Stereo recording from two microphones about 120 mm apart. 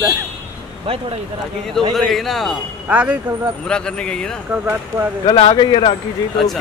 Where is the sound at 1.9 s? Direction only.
Centre (ahead or behind).